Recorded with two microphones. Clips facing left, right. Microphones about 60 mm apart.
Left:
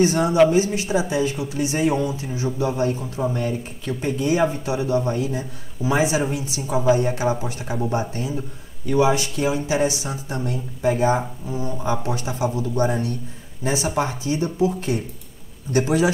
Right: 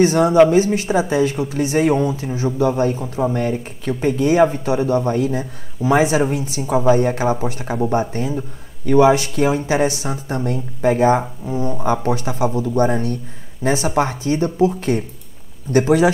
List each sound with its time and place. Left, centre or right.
0.0 s speech: right
3.0 s speech: centre
3.3 s speech: right
4.2 s speech: right
4.5 s speech: right
11.4 s speech: right
12.1 s speech: right
12.5 s speech: right